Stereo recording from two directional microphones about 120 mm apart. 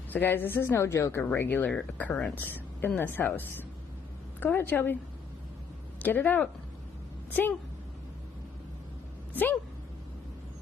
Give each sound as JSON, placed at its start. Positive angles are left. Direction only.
{"t": 0.1, "sound": "a woman's voice", "side_deg": 15}
{"t": 6.0, "sound": "a woman's voice", "side_deg": 15}
{"t": 9.3, "sound": "speech", "side_deg": 15}